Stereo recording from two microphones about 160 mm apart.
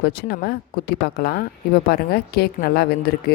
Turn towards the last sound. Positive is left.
turn(degrees=75)  # may be behind; listen again after turning